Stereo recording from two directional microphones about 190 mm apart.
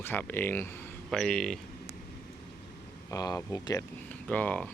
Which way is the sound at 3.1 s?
20° left (ahead or behind).